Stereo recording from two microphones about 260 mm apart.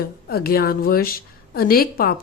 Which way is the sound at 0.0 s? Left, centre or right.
Left.